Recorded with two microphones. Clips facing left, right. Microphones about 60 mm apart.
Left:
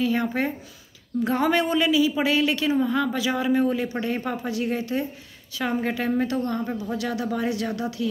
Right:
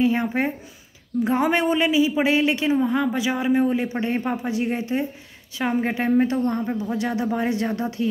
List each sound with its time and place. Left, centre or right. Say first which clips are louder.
0.0 s speech: right 3 dB; right
6.4 s speech: right 3 dB; centre
6.8 s speech: right 3 dB; right